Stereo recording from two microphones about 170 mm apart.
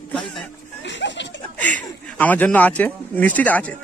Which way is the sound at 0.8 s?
90° left.